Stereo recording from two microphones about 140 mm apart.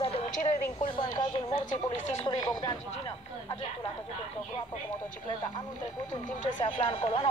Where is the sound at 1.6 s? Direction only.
65° left (ahead or behind).